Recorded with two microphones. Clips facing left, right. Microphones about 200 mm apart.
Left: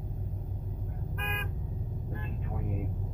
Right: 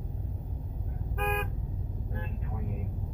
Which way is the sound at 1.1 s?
50° right (ahead or behind).